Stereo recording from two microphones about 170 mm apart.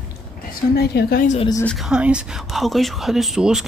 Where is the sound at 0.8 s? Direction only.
65° left (ahead or behind).